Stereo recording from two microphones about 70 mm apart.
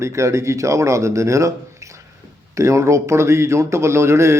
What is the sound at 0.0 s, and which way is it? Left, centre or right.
Speech, right.